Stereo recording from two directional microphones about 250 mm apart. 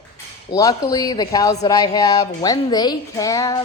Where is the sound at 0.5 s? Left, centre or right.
Centre.